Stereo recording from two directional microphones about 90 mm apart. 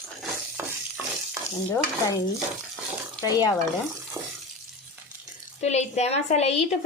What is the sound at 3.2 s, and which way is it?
Stir, 45° left (ahead or behind).